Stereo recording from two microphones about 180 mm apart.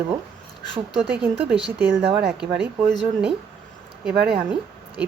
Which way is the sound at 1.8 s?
5° right (ahead or behind).